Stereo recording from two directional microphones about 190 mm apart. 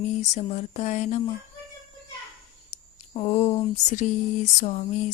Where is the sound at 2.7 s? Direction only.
35° left (ahead or behind).